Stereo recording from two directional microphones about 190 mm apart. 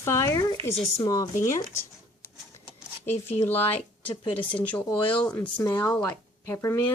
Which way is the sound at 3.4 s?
10° left (ahead or behind).